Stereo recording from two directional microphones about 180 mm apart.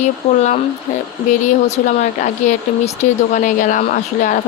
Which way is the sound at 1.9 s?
40° left (ahead or behind).